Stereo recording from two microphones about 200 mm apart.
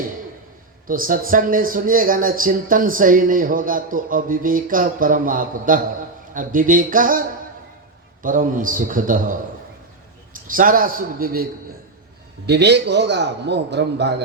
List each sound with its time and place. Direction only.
0.9 s a man's voice: 45° right (ahead or behind)
10.4 s speech: 45° right (ahead or behind)
12.5 s a man's voice: 55° right (ahead or behind)